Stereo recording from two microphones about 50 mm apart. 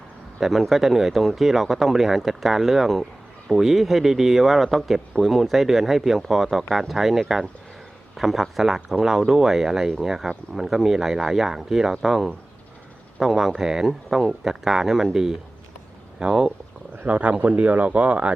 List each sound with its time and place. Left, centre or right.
0.3 s speech: centre
17.0 s speech: right